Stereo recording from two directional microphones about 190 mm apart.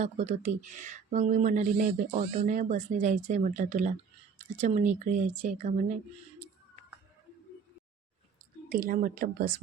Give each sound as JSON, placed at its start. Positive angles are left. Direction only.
{"t": 0.0, "sound": "speech", "side_deg": -40}
{"t": 8.7, "sound": "speech", "side_deg": -45}